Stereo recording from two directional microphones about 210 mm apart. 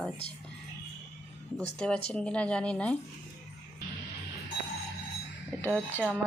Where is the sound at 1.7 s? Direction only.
5° left (ahead or behind).